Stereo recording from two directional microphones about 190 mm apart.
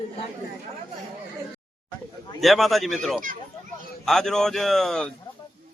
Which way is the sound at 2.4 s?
Centre (ahead or behind).